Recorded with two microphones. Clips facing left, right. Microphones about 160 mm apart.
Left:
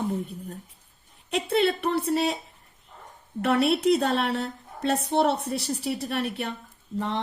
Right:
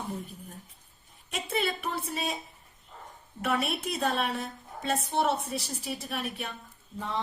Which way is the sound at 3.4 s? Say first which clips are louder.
Left 9 dB; 70° left (ahead or behind).